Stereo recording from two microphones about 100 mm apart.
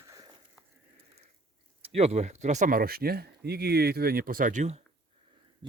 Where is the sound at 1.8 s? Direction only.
90° right.